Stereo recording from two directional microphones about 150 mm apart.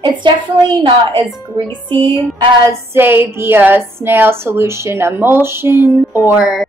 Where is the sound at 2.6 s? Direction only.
15° right (ahead or behind).